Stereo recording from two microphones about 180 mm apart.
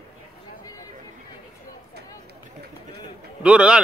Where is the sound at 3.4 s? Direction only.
5° right (ahead or behind).